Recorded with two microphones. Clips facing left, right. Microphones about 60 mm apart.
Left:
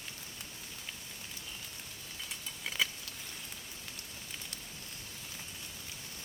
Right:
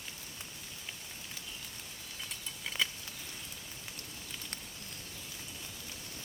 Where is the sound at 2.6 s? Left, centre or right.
Centre.